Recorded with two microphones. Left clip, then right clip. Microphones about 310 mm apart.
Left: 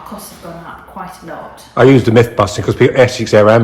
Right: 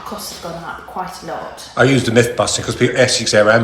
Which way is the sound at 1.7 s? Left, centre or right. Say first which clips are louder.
Left 5 dB; left.